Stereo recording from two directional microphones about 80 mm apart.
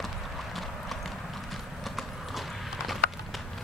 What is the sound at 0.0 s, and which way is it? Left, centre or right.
Clip-clop, centre.